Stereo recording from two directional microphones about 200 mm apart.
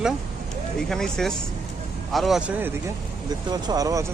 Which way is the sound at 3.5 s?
20° right (ahead or behind).